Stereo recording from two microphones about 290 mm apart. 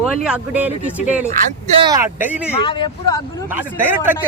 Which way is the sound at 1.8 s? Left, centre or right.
Centre.